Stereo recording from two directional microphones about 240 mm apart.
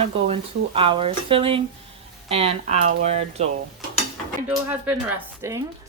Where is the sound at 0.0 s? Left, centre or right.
Right.